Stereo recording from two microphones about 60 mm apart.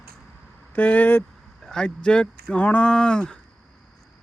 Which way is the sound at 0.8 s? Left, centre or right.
Left.